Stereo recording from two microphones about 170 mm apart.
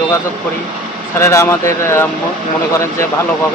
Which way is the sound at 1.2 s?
15° left (ahead or behind).